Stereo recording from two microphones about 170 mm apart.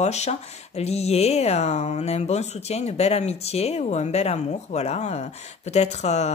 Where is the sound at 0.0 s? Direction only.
40° left (ahead or behind).